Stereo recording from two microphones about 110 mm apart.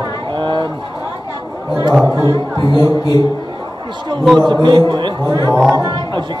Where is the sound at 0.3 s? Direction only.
45° right (ahead or behind).